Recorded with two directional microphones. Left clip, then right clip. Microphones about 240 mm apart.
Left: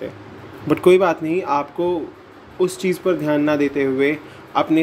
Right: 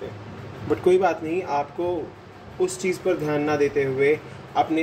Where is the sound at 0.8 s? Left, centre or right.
Left.